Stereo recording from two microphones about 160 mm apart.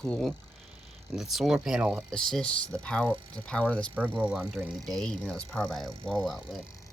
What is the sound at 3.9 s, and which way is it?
Speech, 10° right (ahead or behind).